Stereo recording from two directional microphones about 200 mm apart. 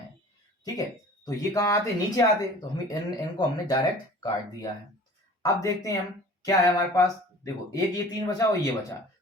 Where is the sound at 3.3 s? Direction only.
20° left (ahead or behind).